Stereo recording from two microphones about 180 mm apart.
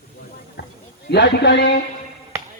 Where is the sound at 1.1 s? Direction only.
70° left (ahead or behind).